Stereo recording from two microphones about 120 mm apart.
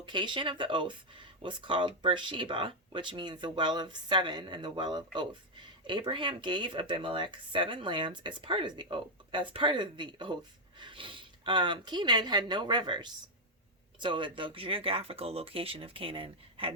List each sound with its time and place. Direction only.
0.0 s speech: 40° right (ahead or behind)